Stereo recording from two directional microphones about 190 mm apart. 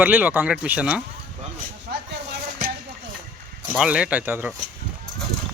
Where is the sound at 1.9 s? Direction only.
55° right (ahead or behind).